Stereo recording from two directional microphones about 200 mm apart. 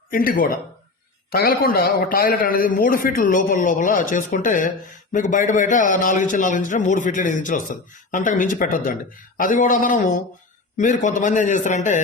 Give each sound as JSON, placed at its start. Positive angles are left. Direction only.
{"t": 0.1, "sound": "a man's voice", "side_deg": 45}